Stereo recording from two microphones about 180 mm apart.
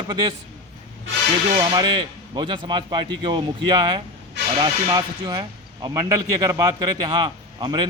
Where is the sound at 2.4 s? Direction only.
25° right (ahead or behind).